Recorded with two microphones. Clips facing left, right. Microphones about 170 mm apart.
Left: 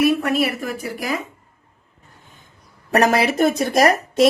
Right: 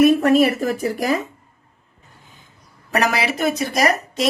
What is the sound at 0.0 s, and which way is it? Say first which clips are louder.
A woman's voice: right 5 dB; 45° right (ahead or behind).